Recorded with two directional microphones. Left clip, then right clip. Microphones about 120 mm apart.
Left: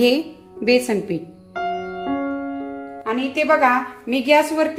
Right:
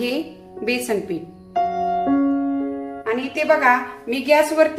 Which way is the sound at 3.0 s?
35° left (ahead or behind).